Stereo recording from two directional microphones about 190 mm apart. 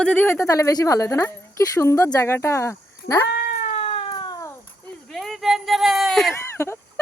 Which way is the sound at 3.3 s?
55° left (ahead or behind).